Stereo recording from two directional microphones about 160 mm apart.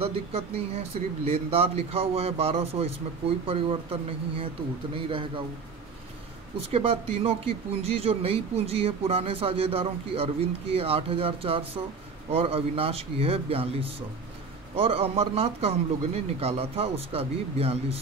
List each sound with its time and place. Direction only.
0.0 s speech: 40° right (ahead or behind)
6.7 s speech: 40° right (ahead or behind)